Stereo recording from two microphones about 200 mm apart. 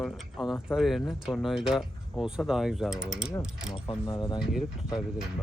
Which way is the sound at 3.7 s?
20° left (ahead or behind).